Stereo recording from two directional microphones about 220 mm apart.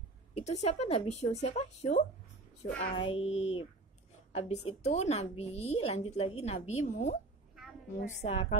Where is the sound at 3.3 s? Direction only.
65° left (ahead or behind).